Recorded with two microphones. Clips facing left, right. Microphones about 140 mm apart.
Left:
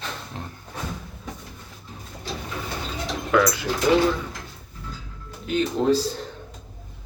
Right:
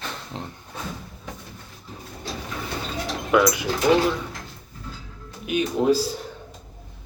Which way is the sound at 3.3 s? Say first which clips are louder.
Right 1 dB; 15° right (ahead or behind).